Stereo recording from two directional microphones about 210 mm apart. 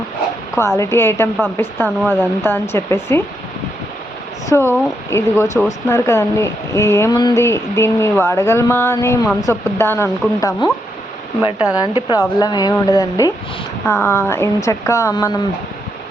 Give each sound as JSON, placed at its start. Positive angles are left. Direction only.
{"t": 0.8, "sound": "speech", "side_deg": 10}
{"t": 4.4, "sound": "speech", "side_deg": 10}